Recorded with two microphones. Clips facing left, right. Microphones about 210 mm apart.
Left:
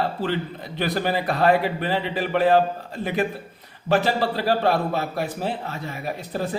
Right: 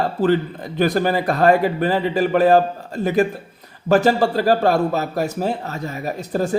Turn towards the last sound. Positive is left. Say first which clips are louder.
# right 5 dB
turn(degrees=-45)  # may be behind; listen again after turning